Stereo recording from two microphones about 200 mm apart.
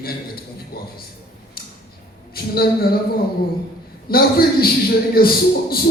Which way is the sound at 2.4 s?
50° left (ahead or behind).